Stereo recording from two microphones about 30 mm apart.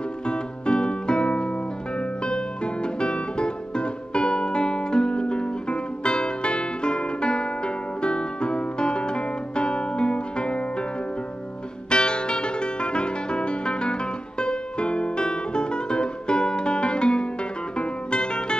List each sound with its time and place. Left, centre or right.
0.3 s music: left
11.9 s music: left